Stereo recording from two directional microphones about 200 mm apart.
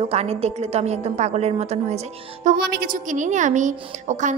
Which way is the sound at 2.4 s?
50° right (ahead or behind).